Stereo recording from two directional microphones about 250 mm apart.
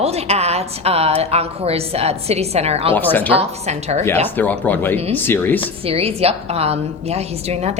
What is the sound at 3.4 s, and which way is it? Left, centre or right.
Speech, right.